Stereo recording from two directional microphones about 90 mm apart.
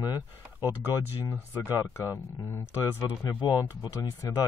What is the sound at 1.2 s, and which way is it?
Speech, 25° left (ahead or behind).